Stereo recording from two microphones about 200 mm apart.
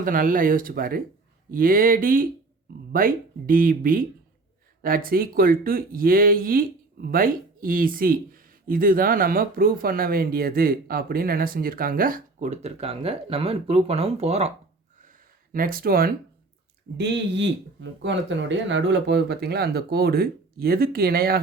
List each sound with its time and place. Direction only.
0.0 s speech: 45° right (ahead or behind)
15.5 s speech: 45° right (ahead or behind)
17.0 s speech: 60° right (ahead or behind)